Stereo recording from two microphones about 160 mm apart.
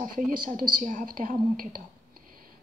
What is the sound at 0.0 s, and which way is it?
A woman's voice, 55° right (ahead or behind).